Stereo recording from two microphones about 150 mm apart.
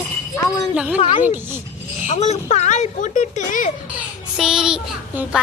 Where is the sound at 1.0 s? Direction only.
40° left (ahead or behind); by 3.7 s 60° left (ahead or behind).